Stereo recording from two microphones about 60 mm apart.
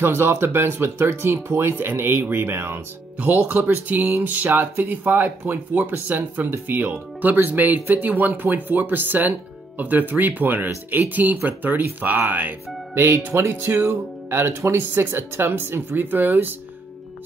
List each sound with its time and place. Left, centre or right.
0.0 s speech: right